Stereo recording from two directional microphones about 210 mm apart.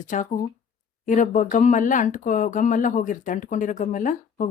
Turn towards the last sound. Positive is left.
turn(degrees=40)  # may be behind; listen again after turning